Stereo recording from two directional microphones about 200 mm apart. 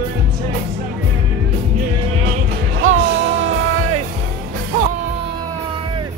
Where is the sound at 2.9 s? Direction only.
70° right (ahead or behind).